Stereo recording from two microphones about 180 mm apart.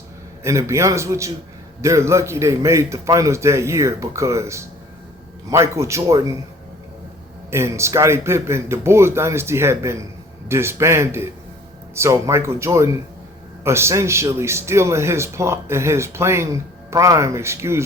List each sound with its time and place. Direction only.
0.4 s a man's voice: 15° right (ahead or behind)
7.5 s a man's voice: 15° right (ahead or behind)